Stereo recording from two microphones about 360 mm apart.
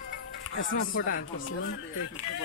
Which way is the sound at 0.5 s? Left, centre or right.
Left.